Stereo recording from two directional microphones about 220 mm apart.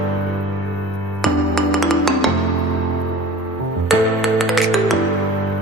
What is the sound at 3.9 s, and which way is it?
Music, centre (ahead or behind).